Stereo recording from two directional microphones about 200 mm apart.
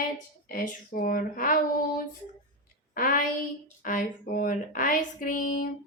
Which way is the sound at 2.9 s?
40° left (ahead or behind).